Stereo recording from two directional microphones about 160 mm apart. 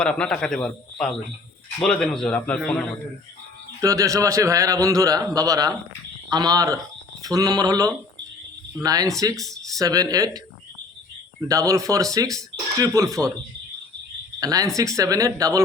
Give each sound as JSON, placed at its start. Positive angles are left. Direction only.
{"t": 0.0, "sound": "a man's voice", "side_deg": 5}
{"t": 3.8, "sound": "speech", "side_deg": -20}
{"t": 14.3, "sound": "speech", "side_deg": -20}